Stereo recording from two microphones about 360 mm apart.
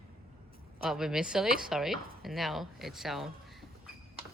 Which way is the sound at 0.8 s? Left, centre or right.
Centre.